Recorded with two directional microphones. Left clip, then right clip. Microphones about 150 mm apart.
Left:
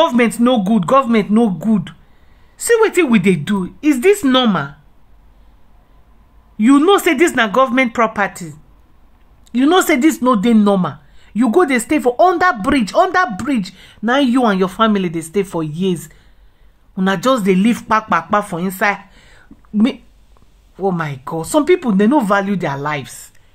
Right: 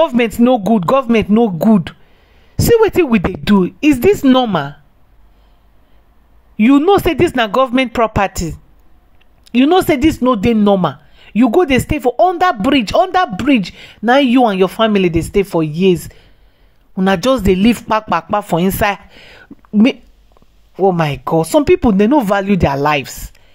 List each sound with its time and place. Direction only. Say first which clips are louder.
0.0 s speech: right 1 dB; 35° right (ahead or behind); by 3.5 s 50° right (ahead or behind)
3.5 s speech: right 4 dB; 30° right (ahead or behind)
6.9 s speech: right 1 dB; 35° right (ahead or behind)
9.7 s speech: left 1 dB; 30° right (ahead or behind)
17.5 s speech: right 2 dB; 35° right (ahead or behind)